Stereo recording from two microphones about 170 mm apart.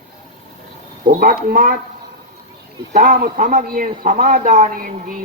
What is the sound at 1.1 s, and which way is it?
Speech, 55° right (ahead or behind).